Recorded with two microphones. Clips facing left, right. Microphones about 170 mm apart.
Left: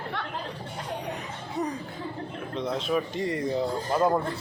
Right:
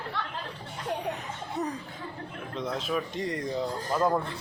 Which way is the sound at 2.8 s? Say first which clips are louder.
Left 3 dB; centre (ahead or behind).